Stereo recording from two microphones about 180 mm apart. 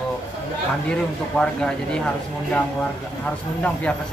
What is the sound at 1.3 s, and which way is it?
Speech, 5° left (ahead or behind).